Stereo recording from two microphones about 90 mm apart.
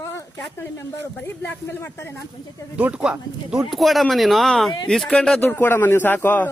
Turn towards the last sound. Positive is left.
turn(degrees=20)  # may be behind; listen again after turning